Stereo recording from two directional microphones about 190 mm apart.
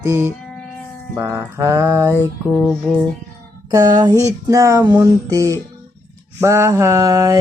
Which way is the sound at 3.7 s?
20° right (ahead or behind).